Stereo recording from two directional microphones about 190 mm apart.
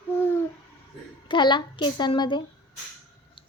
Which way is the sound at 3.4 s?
25° left (ahead or behind).